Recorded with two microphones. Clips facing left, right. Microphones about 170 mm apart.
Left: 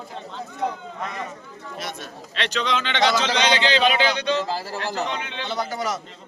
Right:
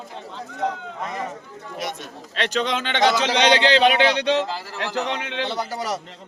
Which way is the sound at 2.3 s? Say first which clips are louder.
Right 2 dB; 45° right (ahead or behind).